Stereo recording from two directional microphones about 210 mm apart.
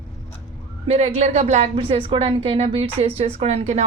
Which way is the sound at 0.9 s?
30° right (ahead or behind).